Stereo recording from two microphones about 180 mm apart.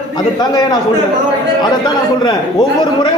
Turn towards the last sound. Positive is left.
turn(degrees=25)  # may be behind; listen again after turning